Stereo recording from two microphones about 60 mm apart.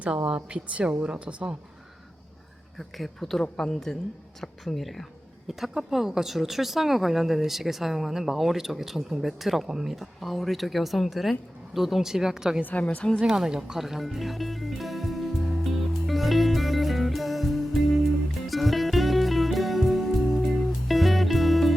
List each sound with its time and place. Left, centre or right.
0.3 s a woman's voice: centre
2.7 s a woman's voice: centre
12.6 s a woman's voice: left
13.1 s music: centre